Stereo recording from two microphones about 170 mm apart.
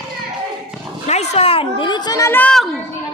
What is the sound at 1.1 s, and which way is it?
Children playing, 40° left (ahead or behind).